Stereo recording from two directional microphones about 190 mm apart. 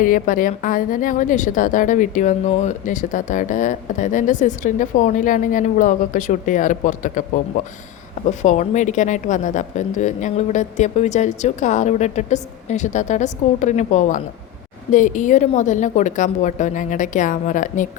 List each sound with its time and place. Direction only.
0.0 s speech: 45° left (ahead or behind)
8.4 s a woman's voice: 40° left (ahead or behind)